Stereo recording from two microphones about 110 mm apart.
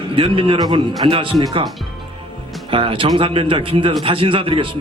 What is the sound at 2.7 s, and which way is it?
A man's voice, 55° right (ahead or behind).